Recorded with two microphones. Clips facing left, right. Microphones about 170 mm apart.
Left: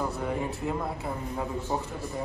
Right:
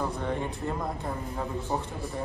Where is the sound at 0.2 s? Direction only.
5° left (ahead or behind).